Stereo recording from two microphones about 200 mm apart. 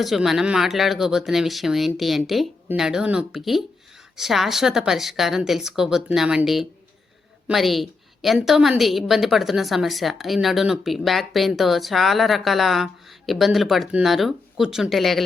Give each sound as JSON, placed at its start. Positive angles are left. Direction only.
{"t": 0.0, "sound": "a woman's voice", "side_deg": 0}